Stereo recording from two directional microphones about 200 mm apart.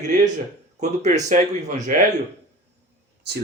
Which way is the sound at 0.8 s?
35° right (ahead or behind).